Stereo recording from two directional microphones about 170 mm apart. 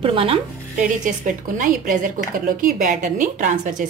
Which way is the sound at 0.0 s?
30° right (ahead or behind).